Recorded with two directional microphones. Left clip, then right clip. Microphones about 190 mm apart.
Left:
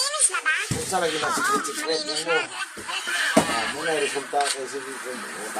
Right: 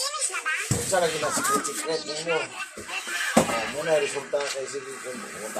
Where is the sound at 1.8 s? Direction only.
45° left (ahead or behind).